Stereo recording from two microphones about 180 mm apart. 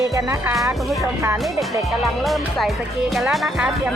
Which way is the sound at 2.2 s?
Centre (ahead or behind).